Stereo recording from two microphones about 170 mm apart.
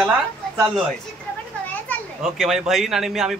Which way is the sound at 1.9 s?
10° left (ahead or behind).